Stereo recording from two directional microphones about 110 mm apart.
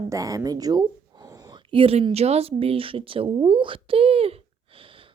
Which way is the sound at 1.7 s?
55° right (ahead or behind).